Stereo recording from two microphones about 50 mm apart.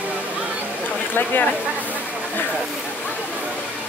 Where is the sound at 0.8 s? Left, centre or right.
Left.